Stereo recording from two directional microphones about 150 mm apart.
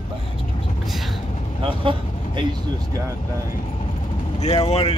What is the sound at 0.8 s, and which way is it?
Vehicle, centre (ahead or behind).